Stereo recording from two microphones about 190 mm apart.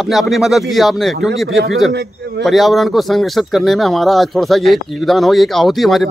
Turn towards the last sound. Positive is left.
turn(degrees=0)  # may be behind; listen again after turning